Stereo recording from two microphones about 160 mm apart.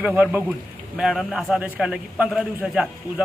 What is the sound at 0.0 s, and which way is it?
A man's voice, 10° right (ahead or behind).